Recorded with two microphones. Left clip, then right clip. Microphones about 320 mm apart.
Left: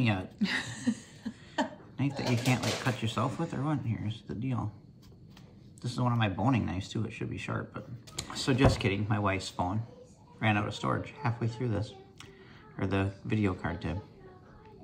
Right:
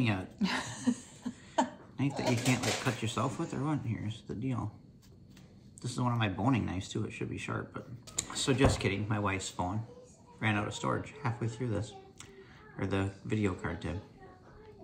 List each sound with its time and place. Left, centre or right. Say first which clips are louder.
0.0 s speech: left 2 dB; centre
0.4 s a sound: left 2 dB; centre
2.5 s speech: left 1 dB; centre
5.8 s speech: left 2 dB; centre